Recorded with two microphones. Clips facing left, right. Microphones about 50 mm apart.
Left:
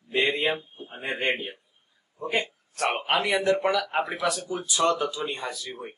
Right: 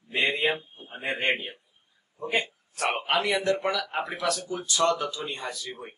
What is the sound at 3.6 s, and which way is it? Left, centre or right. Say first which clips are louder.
A man's voice: left 4 dB; centre.